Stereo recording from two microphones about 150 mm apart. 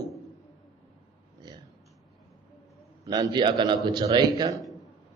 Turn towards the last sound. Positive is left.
turn(degrees=-25)  # may be behind; listen again after turning